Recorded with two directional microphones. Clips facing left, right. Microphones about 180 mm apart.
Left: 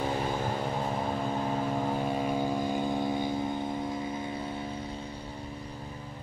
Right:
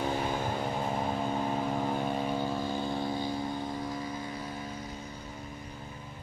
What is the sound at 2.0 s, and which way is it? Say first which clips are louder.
Vehicle: left 2 dB; 5° left (ahead or behind).